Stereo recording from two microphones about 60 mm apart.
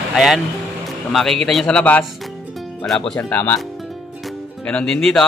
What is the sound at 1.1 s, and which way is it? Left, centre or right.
Speech, centre.